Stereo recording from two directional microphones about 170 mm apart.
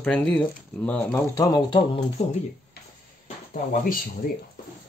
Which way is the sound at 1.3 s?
20° left (ahead or behind).